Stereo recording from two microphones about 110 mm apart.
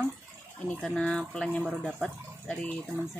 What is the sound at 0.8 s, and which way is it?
Speech, 5° left (ahead or behind).